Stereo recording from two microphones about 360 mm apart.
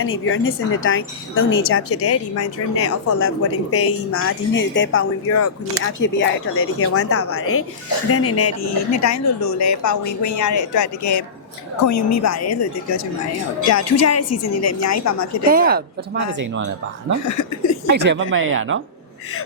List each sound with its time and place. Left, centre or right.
0.0 s speech: left
15.4 s a woman's voice: right
17.2 s speech: left
17.8 s speech: right